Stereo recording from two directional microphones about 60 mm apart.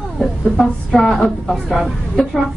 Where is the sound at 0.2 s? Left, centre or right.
Centre.